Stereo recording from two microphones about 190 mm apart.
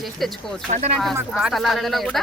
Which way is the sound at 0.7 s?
40° right (ahead or behind).